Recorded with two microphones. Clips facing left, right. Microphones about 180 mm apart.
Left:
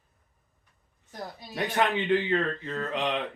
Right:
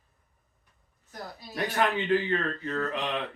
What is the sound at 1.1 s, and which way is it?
Speech, 20° left (ahead or behind).